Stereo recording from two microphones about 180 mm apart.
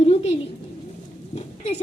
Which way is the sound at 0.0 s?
35° left (ahead or behind).